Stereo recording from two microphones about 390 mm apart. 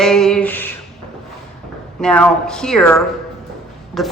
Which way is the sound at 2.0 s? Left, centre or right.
Centre.